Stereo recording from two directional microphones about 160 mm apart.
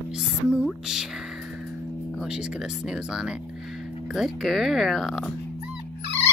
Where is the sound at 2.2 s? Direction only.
5° right (ahead or behind).